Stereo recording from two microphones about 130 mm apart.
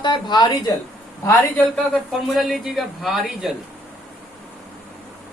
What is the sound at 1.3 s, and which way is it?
Speech, 10° left (ahead or behind).